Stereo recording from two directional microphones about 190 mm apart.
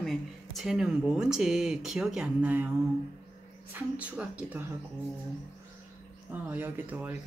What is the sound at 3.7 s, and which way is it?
Speech, 5° right (ahead or behind).